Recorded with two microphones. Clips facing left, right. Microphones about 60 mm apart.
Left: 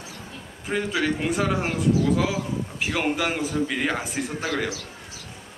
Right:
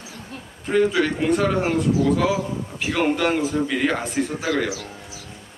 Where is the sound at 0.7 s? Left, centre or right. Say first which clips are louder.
Right 6 dB; centre.